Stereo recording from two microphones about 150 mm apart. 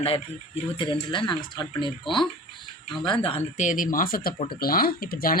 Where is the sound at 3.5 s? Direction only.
60° left (ahead or behind); by 5.3 s 80° left.